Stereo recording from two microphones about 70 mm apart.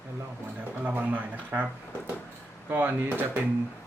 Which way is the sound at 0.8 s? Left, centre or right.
Right.